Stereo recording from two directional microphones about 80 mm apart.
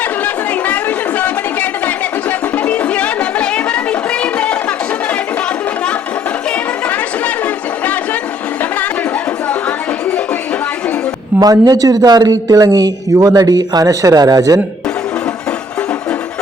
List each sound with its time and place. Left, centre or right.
0.6 s chatter: centre
2.6 s music: centre
6.8 s chatter: centre
11.3 s speech: right